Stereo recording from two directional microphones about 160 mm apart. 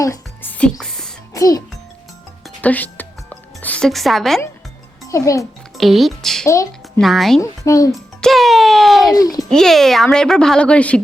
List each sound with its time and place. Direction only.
0.0 s music: 20° left (ahead or behind)
0.5 s music: 5° left (ahead or behind)
1.3 s music: 20° left (ahead or behind)
2.6 s music: 10° left (ahead or behind)
5.0 s a child's voice: 20° left (ahead or behind)
5.7 s speech: centre (ahead or behind)
6.5 s a sound: 20° left (ahead or behind)
7.0 s speech: centre (ahead or behind)
7.6 s a child's voice: 20° left (ahead or behind)
8.2 s a sound: centre (ahead or behind)
9.1 s a child's voice: 25° left (ahead or behind)
9.4 s speech: centre (ahead or behind)